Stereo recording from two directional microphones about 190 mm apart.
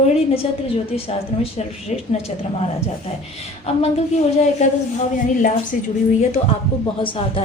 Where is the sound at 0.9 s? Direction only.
30° left (ahead or behind).